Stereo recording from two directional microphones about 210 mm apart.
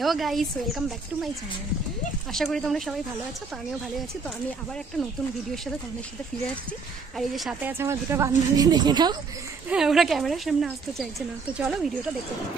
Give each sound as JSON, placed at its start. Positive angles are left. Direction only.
{"t": 0.0, "sound": "speech", "side_deg": 0}
{"t": 2.3, "sound": "speech", "side_deg": 0}
{"t": 7.2, "sound": "speech", "side_deg": 0}
{"t": 7.7, "sound": "a woman's voice", "side_deg": -10}
{"t": 9.7, "sound": "speech", "side_deg": 0}